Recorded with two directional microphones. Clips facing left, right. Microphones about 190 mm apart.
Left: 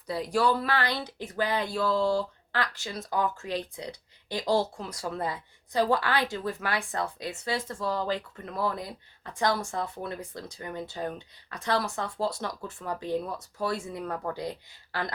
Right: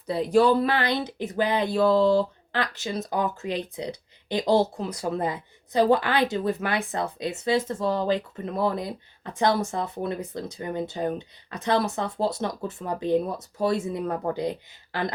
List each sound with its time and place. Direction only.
0.1 s a woman's voice: 20° right (ahead or behind)